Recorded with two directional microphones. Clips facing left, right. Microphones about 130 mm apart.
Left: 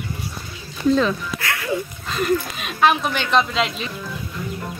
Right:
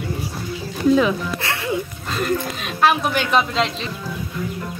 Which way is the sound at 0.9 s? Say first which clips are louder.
Right 2 dB; 10° right (ahead or behind).